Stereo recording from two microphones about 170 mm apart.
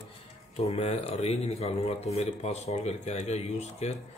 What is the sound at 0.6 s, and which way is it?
Speech, 35° left (ahead or behind).